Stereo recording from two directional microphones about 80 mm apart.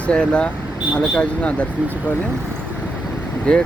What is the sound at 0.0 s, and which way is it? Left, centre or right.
Speech, centre.